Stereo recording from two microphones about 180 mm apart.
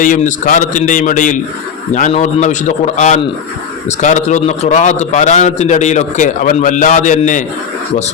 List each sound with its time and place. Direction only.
0.0 s a man's voice: 45° left (ahead or behind)